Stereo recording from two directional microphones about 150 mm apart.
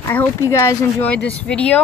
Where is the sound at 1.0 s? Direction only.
10° left (ahead or behind).